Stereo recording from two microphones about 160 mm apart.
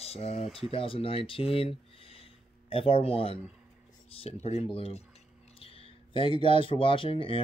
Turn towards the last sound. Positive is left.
turn(degrees=35)  # may be behind; listen again after turning